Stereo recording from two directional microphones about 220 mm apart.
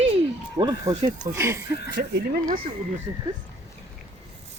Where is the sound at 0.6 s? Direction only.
20° right (ahead or behind).